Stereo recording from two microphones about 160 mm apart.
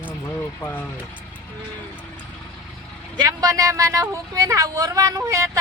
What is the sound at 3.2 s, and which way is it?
Speech, 25° right (ahead or behind).